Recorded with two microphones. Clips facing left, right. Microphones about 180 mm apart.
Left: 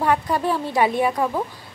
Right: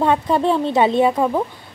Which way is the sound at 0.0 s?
25° right (ahead or behind).